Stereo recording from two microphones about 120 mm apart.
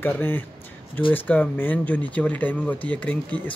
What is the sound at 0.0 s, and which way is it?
Speech, 15° left (ahead or behind).